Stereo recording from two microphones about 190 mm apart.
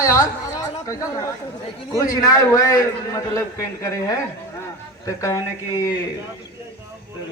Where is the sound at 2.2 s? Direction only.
20° left (ahead or behind).